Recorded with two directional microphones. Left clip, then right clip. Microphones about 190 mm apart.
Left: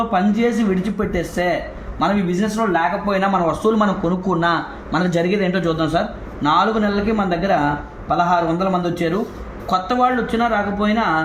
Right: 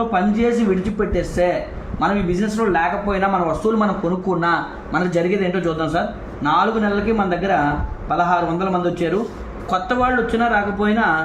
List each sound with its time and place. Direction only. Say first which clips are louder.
0.1 s a man's voice: even; 35° left (ahead or behind)